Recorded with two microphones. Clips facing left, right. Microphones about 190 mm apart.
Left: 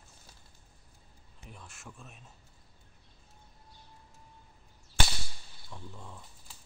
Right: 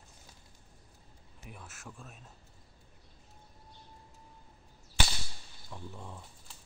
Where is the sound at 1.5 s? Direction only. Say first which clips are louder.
Right 1 dB; 5° right (ahead or behind).